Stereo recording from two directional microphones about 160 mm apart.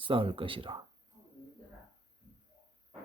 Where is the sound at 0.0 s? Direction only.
35° right (ahead or behind).